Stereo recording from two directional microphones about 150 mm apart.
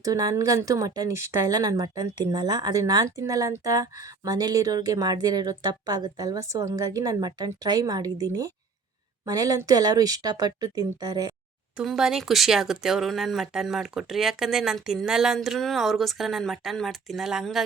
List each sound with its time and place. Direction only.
0.0 s a woman's voice: 25° right (ahead or behind)
11.8 s speech: 5° right (ahead or behind)